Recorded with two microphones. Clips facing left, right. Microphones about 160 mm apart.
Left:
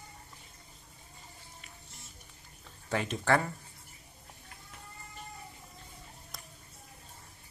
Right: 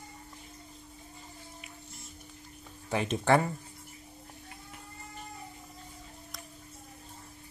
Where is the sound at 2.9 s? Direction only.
15° right (ahead or behind).